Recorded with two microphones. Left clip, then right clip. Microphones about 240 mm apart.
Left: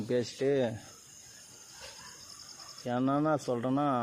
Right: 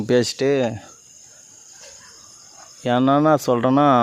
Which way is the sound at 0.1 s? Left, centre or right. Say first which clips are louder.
Right 12 dB; right.